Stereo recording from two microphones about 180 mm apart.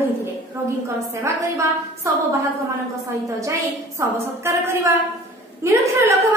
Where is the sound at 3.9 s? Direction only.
15° right (ahead or behind).